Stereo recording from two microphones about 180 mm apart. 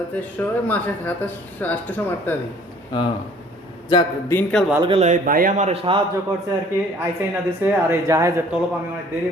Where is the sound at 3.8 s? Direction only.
25° left (ahead or behind).